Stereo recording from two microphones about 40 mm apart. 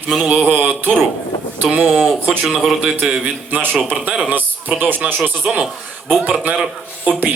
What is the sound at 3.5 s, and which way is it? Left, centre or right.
Mantra, right.